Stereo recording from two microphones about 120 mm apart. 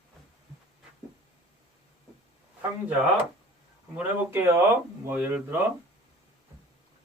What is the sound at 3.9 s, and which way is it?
Speech, 15° right (ahead or behind).